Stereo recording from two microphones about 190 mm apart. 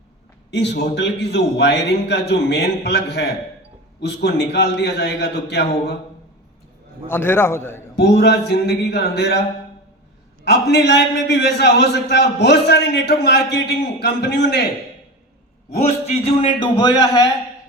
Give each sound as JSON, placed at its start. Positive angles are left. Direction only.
{"t": 0.5, "sound": "a man's voice", "side_deg": 65}
{"t": 7.1, "sound": "a man's voice", "side_deg": 10}
{"t": 7.9, "sound": "a man's voice", "side_deg": 60}
{"t": 10.4, "sound": "a man's voice", "side_deg": 60}
{"t": 15.7, "sound": "a man's voice", "side_deg": 35}